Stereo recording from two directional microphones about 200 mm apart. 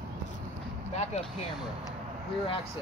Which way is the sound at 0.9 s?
35° left (ahead or behind).